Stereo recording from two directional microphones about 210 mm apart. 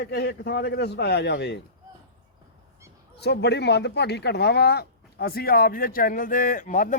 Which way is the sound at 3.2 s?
55° left (ahead or behind).